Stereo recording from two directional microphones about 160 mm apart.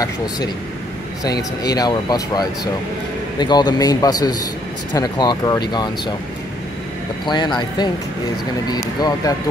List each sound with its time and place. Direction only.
1.2 s speech: 25° left (ahead or behind)
7.2 s speech: 25° left (ahead or behind)